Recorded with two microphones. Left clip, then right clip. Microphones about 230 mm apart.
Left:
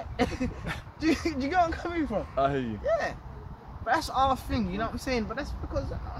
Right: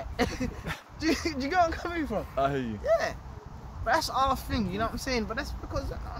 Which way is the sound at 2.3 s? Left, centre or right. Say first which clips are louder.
Left 1 dB; centre.